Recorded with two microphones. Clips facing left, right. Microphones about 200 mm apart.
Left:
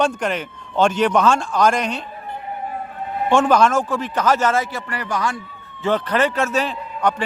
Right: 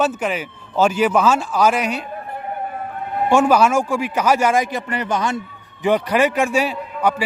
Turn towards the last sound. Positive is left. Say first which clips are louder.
# right 2 dB
turn(degrees=-10)  # may be behind; listen again after turning